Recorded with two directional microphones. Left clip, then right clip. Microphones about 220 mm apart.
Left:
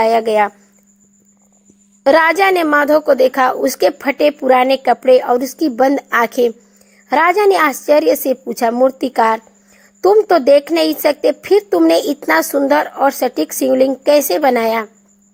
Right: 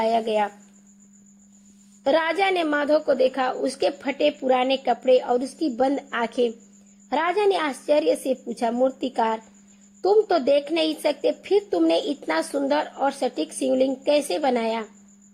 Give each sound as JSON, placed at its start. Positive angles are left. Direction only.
{"t": 0.0, "sound": "a woman's voice", "side_deg": 45}
{"t": 2.0, "sound": "a woman's voice", "side_deg": 45}